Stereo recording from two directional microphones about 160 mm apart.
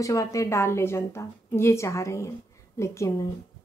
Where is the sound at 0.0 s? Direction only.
20° left (ahead or behind).